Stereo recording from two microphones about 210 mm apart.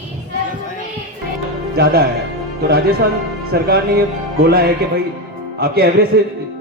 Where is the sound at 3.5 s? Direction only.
45° right (ahead or behind).